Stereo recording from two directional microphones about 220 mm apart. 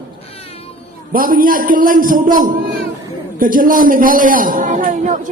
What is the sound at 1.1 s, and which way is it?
A man's voice, 40° right (ahead or behind).